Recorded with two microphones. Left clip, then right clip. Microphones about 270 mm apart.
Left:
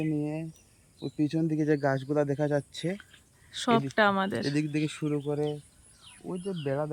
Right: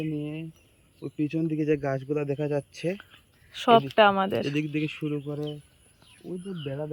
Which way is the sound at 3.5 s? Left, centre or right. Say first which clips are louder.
Right 6 dB; centre.